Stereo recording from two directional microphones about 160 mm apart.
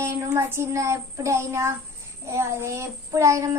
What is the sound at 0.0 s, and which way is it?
Child singing, 15° right (ahead or behind).